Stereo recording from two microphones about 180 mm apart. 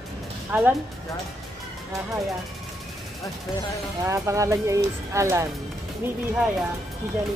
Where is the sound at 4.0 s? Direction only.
15° right (ahead or behind).